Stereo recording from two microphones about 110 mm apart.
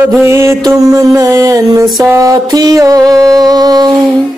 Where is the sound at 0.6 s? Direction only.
35° right (ahead or behind).